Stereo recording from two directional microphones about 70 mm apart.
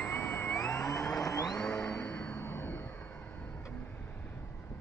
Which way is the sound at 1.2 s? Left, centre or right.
Left.